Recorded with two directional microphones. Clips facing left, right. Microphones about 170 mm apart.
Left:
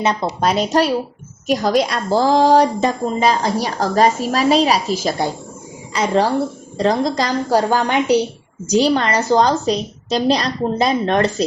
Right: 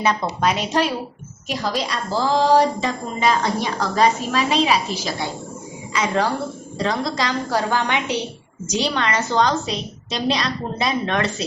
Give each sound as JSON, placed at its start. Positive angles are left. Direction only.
{"t": 0.0, "sound": "a woman's voice", "side_deg": 25}
{"t": 0.4, "sound": "a woman's voice", "side_deg": 35}
{"t": 1.5, "sound": "a woman's voice", "side_deg": 50}
{"t": 3.2, "sound": "a woman's voice", "side_deg": 35}